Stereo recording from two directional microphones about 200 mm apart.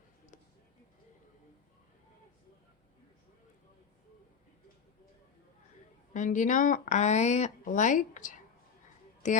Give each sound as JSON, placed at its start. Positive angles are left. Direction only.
{"t": 6.1, "sound": "speech", "side_deg": 40}